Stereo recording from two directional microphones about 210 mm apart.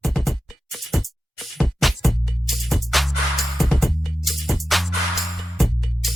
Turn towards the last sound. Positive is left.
turn(degrees=0)  # may be behind; listen again after turning